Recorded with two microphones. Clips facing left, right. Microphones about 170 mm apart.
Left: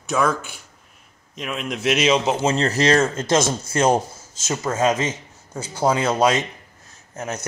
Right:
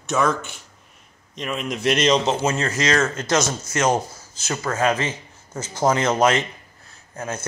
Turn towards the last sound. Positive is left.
turn(degrees=20)  # may be behind; listen again after turning